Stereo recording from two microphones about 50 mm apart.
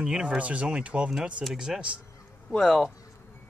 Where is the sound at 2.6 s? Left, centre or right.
Centre.